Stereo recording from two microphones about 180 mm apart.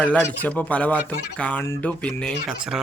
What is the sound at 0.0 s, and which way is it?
Speech, 10° left (ahead or behind).